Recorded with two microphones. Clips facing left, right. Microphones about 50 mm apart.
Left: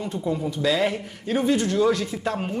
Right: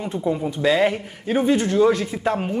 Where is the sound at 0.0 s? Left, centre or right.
Right.